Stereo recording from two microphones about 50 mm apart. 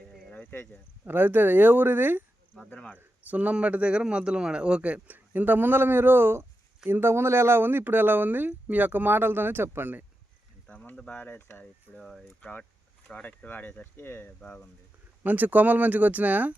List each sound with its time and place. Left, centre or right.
1.0 s speech: right
2.7 s speech: centre
3.2 s a man's voice: right
4.9 s speech: right
11.2 s speech: left
14.4 s speech: left
15.2 s speech: right